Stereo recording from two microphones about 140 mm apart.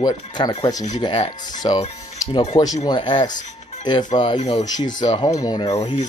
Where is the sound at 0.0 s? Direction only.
30° left (ahead or behind).